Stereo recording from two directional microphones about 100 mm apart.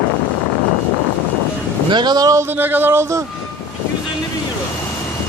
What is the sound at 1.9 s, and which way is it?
Speech, 45° right (ahead or behind).